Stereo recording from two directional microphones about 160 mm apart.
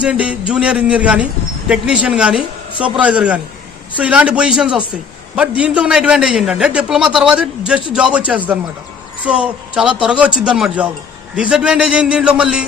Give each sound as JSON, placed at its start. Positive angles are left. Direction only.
{"t": 0.0, "sound": "a man's voice", "side_deg": -5}